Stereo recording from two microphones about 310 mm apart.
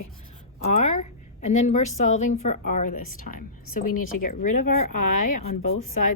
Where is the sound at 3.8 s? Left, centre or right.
Left.